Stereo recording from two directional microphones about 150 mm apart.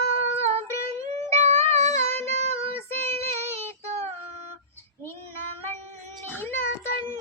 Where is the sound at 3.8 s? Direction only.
50° right (ahead or behind).